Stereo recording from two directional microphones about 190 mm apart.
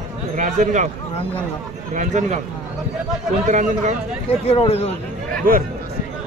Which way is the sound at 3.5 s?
40° right (ahead or behind).